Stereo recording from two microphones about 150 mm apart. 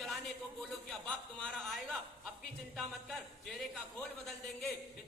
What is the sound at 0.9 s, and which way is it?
Speech, 5° left (ahead or behind).